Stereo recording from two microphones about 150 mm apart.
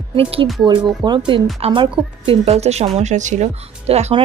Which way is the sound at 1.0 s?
30° right (ahead or behind).